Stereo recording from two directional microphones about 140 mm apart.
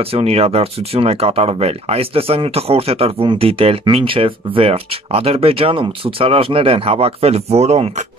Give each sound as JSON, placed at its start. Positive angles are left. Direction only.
{"t": 0.0, "sound": "speech", "side_deg": -45}